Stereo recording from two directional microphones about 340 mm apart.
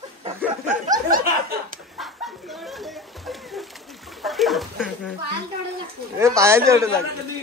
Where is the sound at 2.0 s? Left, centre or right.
Centre.